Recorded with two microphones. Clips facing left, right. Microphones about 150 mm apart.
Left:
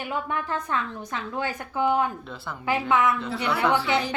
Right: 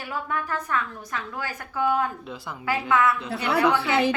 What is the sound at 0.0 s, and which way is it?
A woman's voice, 20° left (ahead or behind).